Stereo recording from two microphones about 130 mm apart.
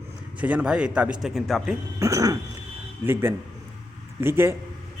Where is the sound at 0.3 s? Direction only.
10° right (ahead or behind).